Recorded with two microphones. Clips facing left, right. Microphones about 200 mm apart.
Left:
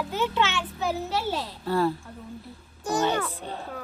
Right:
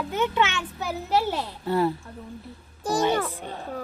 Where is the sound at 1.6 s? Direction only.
20° right (ahead or behind).